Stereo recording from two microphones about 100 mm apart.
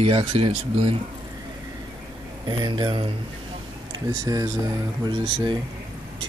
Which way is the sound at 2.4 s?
50° right (ahead or behind).